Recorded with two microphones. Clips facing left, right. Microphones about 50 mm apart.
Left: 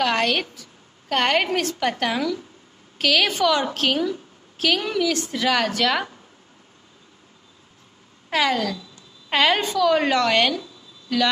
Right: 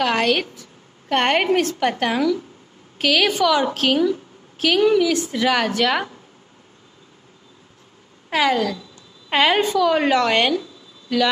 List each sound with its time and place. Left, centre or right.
0.0 s a woman's voice: centre
0.6 s a sound: right
1.3 s a woman's voice: centre
8.3 s a woman's voice: centre